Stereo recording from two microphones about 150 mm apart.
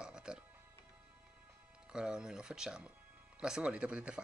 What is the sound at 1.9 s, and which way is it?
Speech, 5° right (ahead or behind).